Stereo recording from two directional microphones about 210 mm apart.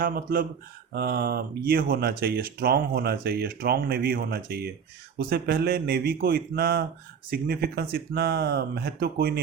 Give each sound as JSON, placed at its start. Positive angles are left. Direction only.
{"t": 0.0, "sound": "speech", "side_deg": -40}